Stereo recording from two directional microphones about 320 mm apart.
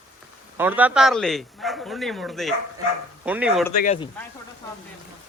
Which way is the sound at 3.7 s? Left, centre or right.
Left.